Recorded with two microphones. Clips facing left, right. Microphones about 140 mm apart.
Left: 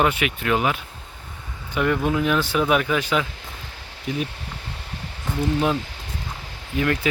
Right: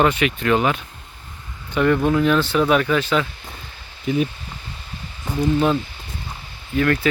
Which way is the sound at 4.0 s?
Centre (ahead or behind).